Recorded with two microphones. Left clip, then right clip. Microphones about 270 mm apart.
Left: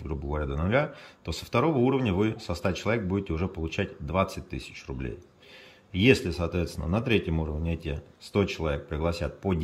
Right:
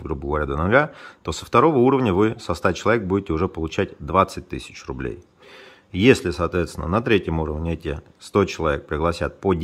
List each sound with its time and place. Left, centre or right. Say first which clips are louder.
0.3 s speech: right 9 dB; centre